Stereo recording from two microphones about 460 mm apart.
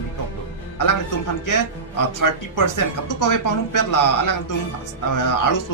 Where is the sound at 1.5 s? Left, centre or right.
Left.